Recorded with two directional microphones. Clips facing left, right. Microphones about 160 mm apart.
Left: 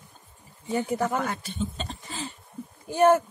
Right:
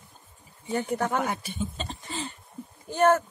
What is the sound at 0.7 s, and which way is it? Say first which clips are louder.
Speech: left 1 dB; 5° left (ahead or behind).